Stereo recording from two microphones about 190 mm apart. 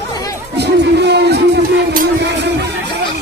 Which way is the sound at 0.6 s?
60° right (ahead or behind).